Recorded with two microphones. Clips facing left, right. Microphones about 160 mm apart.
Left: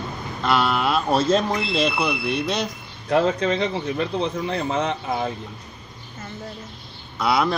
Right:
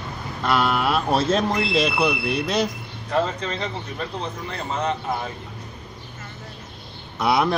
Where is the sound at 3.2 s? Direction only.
70° left (ahead or behind).